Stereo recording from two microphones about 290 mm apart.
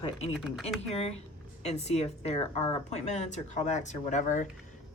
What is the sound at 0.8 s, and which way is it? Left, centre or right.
Speech, left.